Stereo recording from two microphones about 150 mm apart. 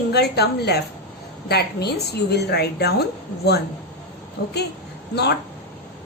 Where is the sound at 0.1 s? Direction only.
90° left.